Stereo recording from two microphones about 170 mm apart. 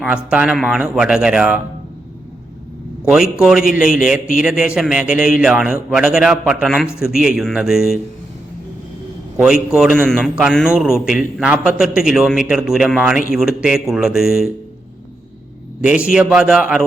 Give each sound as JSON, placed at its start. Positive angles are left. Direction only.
{"t": 0.0, "sound": "a man's voice", "side_deg": -5}
{"t": 3.0, "sound": "a man's voice", "side_deg": -5}
{"t": 9.4, "sound": "a man's voice", "side_deg": -5}
{"t": 15.8, "sound": "a man's voice", "side_deg": -5}